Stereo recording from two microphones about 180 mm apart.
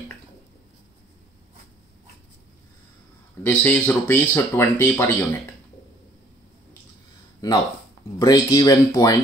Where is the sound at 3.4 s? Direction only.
10° left (ahead or behind).